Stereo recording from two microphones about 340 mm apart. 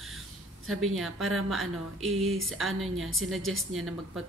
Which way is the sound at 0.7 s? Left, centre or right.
Centre.